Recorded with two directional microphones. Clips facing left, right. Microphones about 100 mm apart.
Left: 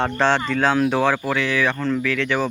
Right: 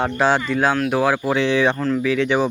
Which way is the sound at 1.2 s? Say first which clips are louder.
Right 4 dB; 20° right (ahead or behind).